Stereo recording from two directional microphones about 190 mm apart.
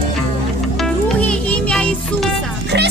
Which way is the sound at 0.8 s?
5° left (ahead or behind).